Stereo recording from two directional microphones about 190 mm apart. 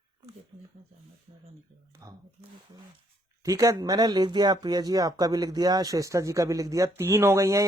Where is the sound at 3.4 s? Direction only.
15° right (ahead or behind).